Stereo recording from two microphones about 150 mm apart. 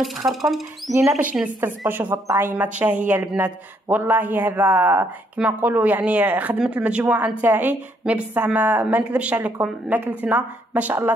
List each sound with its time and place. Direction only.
0.3 s speech: centre (ahead or behind)
0.9 s speech: 15° right (ahead or behind)
1.3 s speech: 5° right (ahead or behind)